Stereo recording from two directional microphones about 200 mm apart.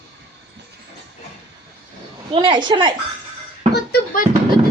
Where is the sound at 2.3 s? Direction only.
25° right (ahead or behind).